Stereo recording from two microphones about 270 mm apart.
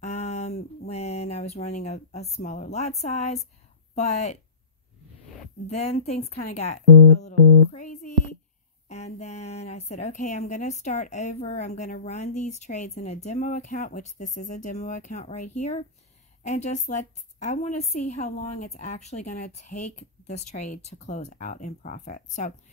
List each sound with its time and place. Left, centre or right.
0.0 s a sound: left
1.8 s a woman's voice: left
5.7 s a woman's voice: left